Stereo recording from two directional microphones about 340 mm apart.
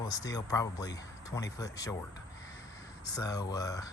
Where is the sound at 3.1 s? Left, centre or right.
Centre.